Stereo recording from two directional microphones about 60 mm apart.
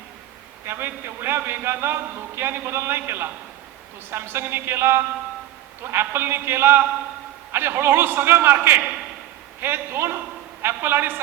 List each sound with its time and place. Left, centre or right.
0.6 s a man's voice: right